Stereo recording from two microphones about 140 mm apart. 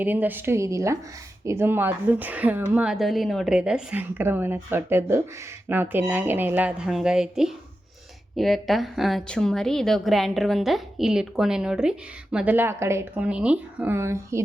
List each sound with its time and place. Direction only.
0.0 s a woman's voice: 15° right (ahead or behind)